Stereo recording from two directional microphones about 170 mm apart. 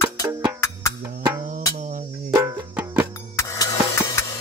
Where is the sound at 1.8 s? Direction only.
45° right (ahead or behind).